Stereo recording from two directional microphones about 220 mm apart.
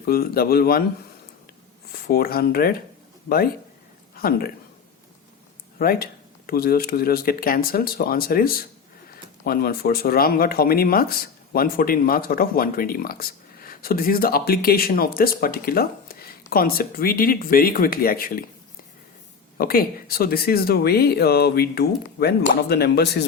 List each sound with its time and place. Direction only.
0.0 s speech: 45° left (ahead or behind)
2.0 s speech: 45° left (ahead or behind)
5.8 s speech: 45° left (ahead or behind)
19.5 s speech: 40° left (ahead or behind)